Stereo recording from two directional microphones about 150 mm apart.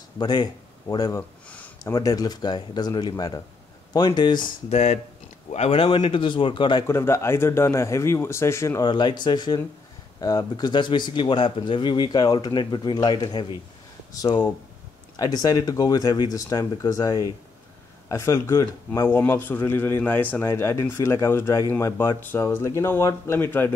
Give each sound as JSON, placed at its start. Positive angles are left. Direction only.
{"t": 0.2, "sound": "speech", "side_deg": 30}
{"t": 1.5, "sound": "a sound", "side_deg": 10}
{"t": 2.0, "sound": "speech", "side_deg": 25}
{"t": 4.6, "sound": "speech", "side_deg": 50}
{"t": 6.9, "sound": "speech", "side_deg": 20}
{"t": 15.1, "sound": "speech", "side_deg": 25}